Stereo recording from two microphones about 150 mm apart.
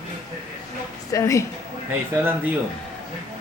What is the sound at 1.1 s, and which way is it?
Speech, 20° left (ahead or behind).